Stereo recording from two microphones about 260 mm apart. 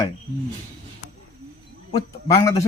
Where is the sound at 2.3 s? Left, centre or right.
Centre.